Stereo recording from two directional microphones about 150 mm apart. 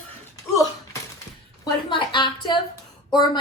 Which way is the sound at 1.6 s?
35° left (ahead or behind).